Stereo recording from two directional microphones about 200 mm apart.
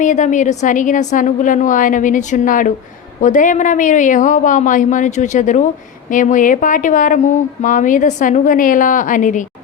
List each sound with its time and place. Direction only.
0.0 s speech: 40° left (ahead or behind)